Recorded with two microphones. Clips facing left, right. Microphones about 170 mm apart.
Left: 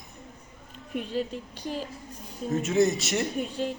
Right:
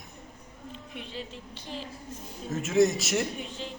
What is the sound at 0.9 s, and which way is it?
Speech, 45° left (ahead or behind).